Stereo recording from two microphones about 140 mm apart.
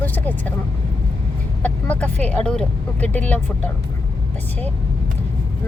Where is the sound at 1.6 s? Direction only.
10° left (ahead or behind).